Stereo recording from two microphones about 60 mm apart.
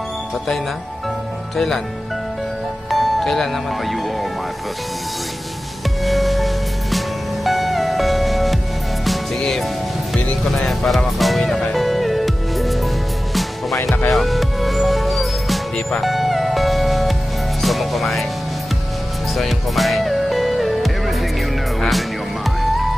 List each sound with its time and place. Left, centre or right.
2.9 s speech: centre
6.0 s music: centre
17.6 s speech: centre
19.3 s music: centre